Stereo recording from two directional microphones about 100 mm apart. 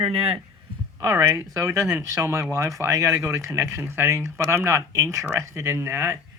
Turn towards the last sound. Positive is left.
turn(degrees=-25)  # may be behind; listen again after turning